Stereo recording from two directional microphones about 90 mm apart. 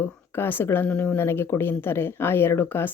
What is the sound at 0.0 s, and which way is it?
A woman's voice, 25° left (ahead or behind).